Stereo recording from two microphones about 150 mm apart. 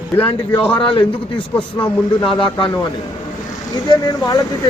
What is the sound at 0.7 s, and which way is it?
Speech, 35° left (ahead or behind).